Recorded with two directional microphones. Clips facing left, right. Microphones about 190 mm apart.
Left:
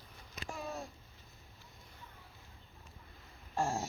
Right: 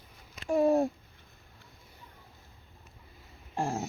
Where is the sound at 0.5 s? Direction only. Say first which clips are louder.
Right 19 dB; 60° right (ahead or behind).